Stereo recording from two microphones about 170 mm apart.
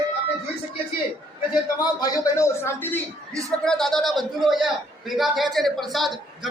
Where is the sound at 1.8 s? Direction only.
20° left (ahead or behind).